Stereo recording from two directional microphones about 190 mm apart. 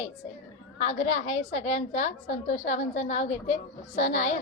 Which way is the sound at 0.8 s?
35° left (ahead or behind).